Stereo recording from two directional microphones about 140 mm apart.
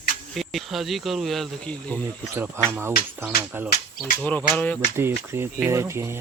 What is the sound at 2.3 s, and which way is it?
Speech, 15° right (ahead or behind).